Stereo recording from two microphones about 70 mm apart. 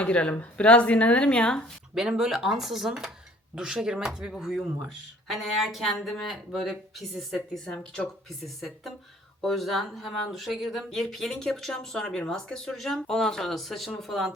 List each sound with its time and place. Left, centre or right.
0.0 s speech: centre
2.0 s speech: centre